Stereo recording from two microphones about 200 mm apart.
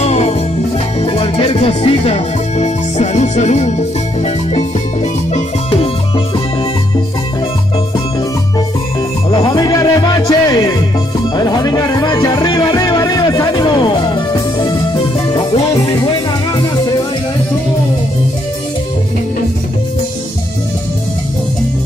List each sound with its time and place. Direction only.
0.0 s music: 30° left (ahead or behind)
9.5 s music: 15° left (ahead or behind)